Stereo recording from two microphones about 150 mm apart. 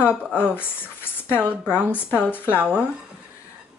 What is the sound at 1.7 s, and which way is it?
Speech, 15° left (ahead or behind).